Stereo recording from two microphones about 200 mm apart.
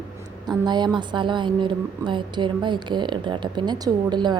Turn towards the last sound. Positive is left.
turn(degrees=-20)  # may be behind; listen again after turning